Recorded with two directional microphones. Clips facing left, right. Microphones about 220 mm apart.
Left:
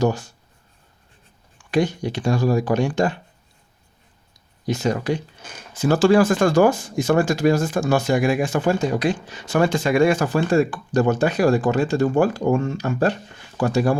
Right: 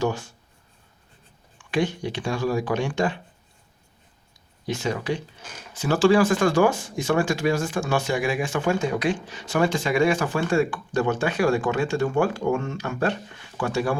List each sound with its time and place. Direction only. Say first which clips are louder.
0.0 s speech: left 4 dB; 40° left (ahead or behind)
1.7 s speech: left 4 dB; 40° left (ahead or behind)
4.6 s speech: left 5 dB; 40° left (ahead or behind)